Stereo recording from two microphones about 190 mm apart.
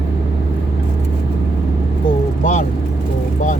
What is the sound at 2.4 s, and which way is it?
Vehicle, 40° left (ahead or behind).